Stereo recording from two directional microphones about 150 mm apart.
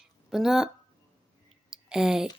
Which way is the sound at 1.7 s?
5° right (ahead or behind).